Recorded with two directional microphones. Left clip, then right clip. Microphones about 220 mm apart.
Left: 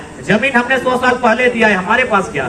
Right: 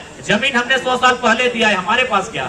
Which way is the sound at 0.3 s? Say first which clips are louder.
Left 2 dB; 55° right (ahead or behind).